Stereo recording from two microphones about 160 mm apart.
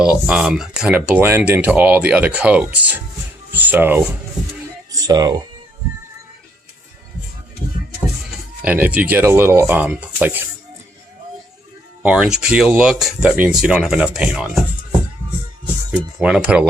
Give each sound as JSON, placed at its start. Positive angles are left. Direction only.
{"t": 0.0, "sound": "speech", "side_deg": -5}
{"t": 4.9, "sound": "speech", "side_deg": -20}
{"t": 8.6, "sound": "speech", "side_deg": -10}
{"t": 12.0, "sound": "speech", "side_deg": -5}
{"t": 16.1, "sound": "speech", "side_deg": -5}